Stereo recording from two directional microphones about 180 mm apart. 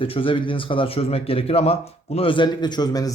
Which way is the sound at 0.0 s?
30° left (ahead or behind).